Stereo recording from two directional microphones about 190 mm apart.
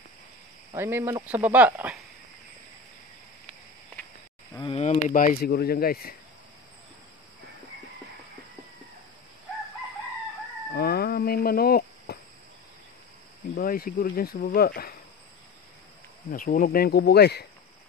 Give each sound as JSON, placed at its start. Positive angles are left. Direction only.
{"t": 0.7, "sound": "speech", "side_deg": -10}
{"t": 4.6, "sound": "speech", "side_deg": 30}
{"t": 10.7, "sound": "a sound", "side_deg": 55}
{"t": 13.6, "sound": "speech", "side_deg": 50}
{"t": 16.3, "sound": "speech", "side_deg": 45}